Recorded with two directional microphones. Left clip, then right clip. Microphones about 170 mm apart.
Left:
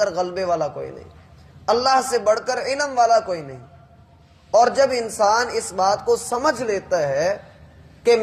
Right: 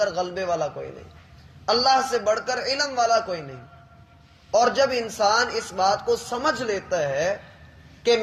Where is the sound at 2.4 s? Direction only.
25° right (ahead or behind).